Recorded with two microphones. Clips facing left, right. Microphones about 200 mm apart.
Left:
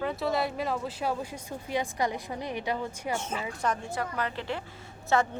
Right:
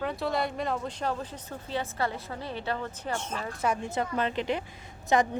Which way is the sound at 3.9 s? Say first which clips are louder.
Right 3 dB; 25° right (ahead or behind).